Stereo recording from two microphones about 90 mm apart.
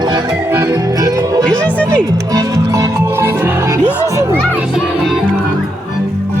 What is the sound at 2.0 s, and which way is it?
Music, 45° right (ahead or behind).